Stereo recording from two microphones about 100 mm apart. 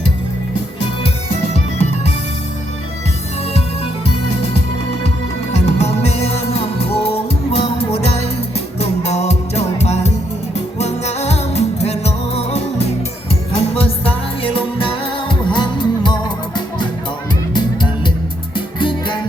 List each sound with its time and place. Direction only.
1.5 s music: 90° left
5.0 s music: 90° left
8.5 s music: 90° left
13.6 s music: 75° left (ahead or behind); by 19.2 s 55° left (ahead or behind)